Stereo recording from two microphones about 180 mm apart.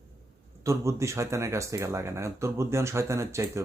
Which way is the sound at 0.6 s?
15° right (ahead or behind).